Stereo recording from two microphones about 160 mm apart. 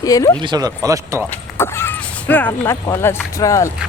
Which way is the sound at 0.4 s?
25° right (ahead or behind).